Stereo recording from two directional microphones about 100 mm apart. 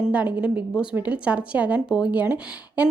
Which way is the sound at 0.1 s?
15° right (ahead or behind).